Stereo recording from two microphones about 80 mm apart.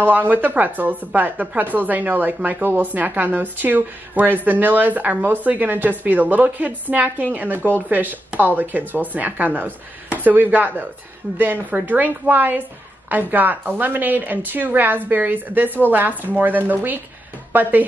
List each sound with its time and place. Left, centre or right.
0.0 s a woman's voice: right